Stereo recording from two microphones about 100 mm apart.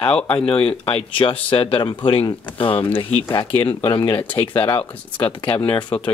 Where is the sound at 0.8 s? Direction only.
60° left (ahead or behind).